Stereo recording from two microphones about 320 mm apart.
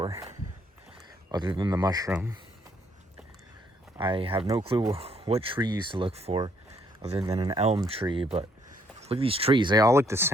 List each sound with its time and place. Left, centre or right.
0.0 s speech: centre
3.9 s speech: centre